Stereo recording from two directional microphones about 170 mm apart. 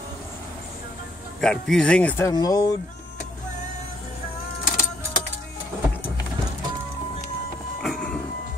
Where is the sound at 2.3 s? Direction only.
20° left (ahead or behind).